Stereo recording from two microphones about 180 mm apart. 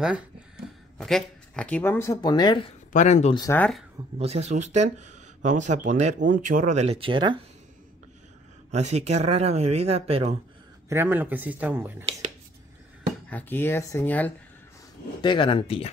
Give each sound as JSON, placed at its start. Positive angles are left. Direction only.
{"t": 0.9, "sound": "speech", "side_deg": 0}
{"t": 2.9, "sound": "speech", "side_deg": 40}
{"t": 3.3, "sound": "speech", "side_deg": 15}
{"t": 4.2, "sound": "speech", "side_deg": -35}
{"t": 8.7, "sound": "speech", "side_deg": -40}
{"t": 10.9, "sound": "speech", "side_deg": -10}
{"t": 13.3, "sound": "speech", "side_deg": 10}
{"t": 15.2, "sound": "speech", "side_deg": 25}